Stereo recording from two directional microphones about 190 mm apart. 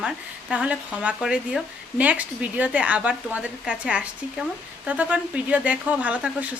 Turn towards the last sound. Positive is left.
turn(degrees=-5)  # may be behind; listen again after turning